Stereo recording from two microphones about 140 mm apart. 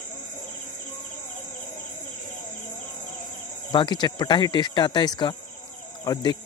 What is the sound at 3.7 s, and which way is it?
Speech, 30° left (ahead or behind).